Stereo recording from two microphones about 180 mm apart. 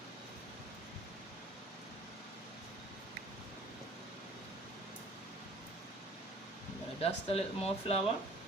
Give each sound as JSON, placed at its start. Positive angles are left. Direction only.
{"t": 7.0, "sound": "speech", "side_deg": 35}